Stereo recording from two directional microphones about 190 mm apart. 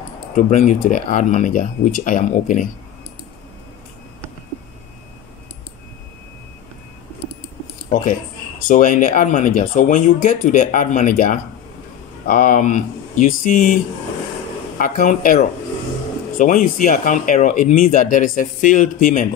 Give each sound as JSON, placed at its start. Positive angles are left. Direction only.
{"t": 0.4, "sound": "speech", "side_deg": 40}
{"t": 7.9, "sound": "speech", "side_deg": 45}
{"t": 14.8, "sound": "speech", "side_deg": 45}